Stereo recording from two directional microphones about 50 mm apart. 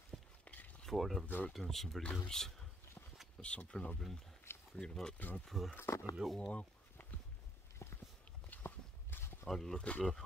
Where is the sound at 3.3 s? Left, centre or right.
Centre.